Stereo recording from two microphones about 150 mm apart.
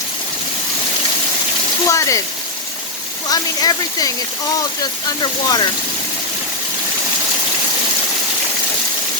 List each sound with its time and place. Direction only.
1.9 s speech: 20° left (ahead or behind)
3.2 s speech: 25° left (ahead or behind)